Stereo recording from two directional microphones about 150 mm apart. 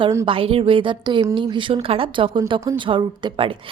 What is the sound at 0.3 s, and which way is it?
A woman's voice, 40° right (ahead or behind).